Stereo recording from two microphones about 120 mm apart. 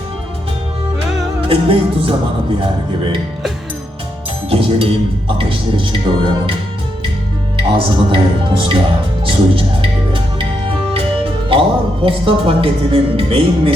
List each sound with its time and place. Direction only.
1.5 s speech: 50° right (ahead or behind)
4.4 s speech: 50° right (ahead or behind)
7.7 s speech: 45° right (ahead or behind)
9.2 s music: 45° right (ahead or behind)
11.5 s speech: 50° right (ahead or behind)